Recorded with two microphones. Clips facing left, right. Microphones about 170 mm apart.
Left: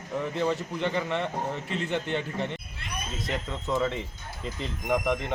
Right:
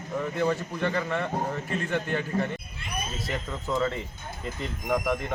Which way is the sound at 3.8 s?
20° left (ahead or behind).